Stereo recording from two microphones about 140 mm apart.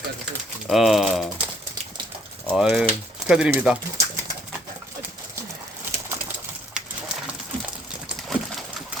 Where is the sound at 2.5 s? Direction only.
5° right (ahead or behind).